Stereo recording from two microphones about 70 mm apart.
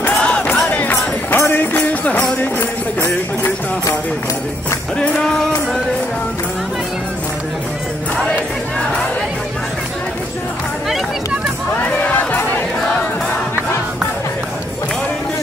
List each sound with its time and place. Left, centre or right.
0.2 s music: centre
3.0 s music: left
4.9 s music: centre
11.7 s crowd: left